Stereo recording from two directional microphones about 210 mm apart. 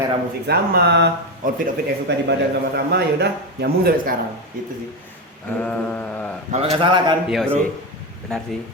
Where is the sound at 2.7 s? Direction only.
50° right (ahead or behind).